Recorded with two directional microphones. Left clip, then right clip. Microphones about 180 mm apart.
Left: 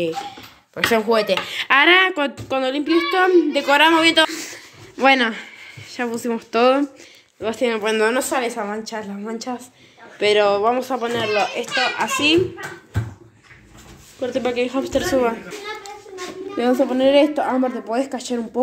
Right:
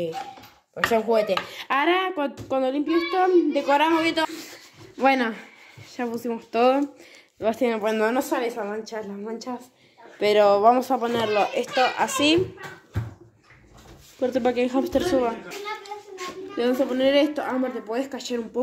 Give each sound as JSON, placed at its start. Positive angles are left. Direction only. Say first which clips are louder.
{"t": 1.1, "sound": "speech", "louder": "left 4 dB", "side_deg": -5}
{"t": 2.5, "sound": "speech", "louder": "left 2 dB", "side_deg": -15}
{"t": 2.8, "sound": "a child's voice", "louder": "left 8 dB", "side_deg": -5}
{"t": 7.4, "sound": "speech", "louder": "left 2 dB", "side_deg": -20}
{"t": 10.1, "sound": "speech", "louder": "left 2 dB", "side_deg": -20}
{"t": 14.2, "sound": "speech", "louder": "left 1 dB", "side_deg": -25}
{"t": 15.0, "sound": "speech", "louder": "left 4 dB", "side_deg": 0}
{"t": 16.5, "sound": "speech", "louder": "left 5 dB", "side_deg": 5}